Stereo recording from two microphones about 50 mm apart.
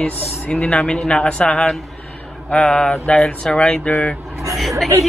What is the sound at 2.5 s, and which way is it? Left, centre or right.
Mantra, centre.